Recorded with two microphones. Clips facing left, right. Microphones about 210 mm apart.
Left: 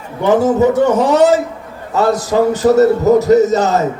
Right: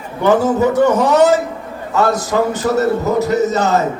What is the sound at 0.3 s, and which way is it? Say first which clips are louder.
A man's voice: left 2 dB; 20° left (ahead or behind).